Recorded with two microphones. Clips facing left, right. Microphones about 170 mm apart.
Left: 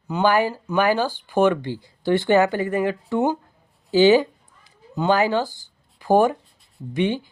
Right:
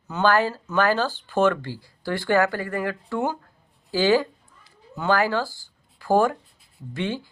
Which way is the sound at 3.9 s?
20° left (ahead or behind).